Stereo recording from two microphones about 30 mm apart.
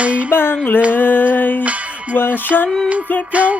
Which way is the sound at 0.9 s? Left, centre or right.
Left.